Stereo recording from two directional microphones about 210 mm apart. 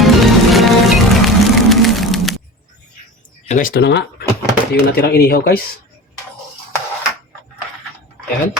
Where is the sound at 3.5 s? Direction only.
40° left (ahead or behind).